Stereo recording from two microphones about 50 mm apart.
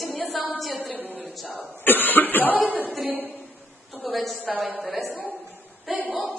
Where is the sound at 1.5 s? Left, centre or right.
Left.